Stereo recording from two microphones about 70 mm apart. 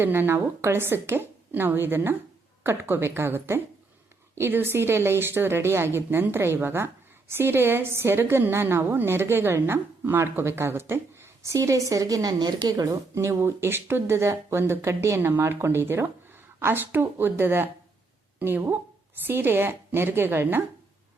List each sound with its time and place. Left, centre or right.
0.0 s a woman's voice: right
13.1 s a woman's voice: right